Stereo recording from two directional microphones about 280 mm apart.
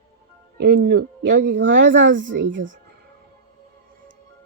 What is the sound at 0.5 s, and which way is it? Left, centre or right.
Speech, right.